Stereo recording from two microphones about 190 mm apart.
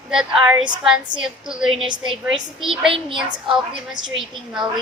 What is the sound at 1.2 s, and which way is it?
Speech, 5° right (ahead or behind).